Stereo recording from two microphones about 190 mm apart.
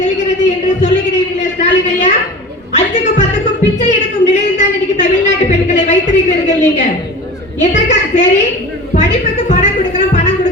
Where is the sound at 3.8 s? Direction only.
40° left (ahead or behind).